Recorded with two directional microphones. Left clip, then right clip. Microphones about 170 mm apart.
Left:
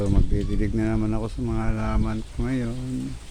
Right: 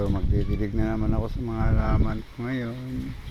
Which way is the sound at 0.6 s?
20° left (ahead or behind).